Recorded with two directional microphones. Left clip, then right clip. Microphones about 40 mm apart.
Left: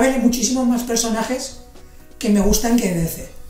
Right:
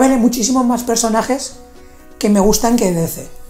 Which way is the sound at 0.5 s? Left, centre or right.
Left.